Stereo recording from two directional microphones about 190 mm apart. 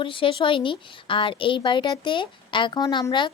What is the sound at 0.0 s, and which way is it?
A woman's voice, 25° left (ahead or behind).